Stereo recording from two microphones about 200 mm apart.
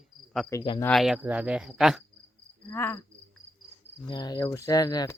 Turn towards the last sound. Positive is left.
turn(degrees=20)  # may be behind; listen again after turning